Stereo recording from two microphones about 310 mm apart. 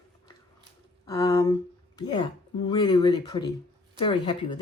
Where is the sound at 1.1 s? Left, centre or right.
Centre.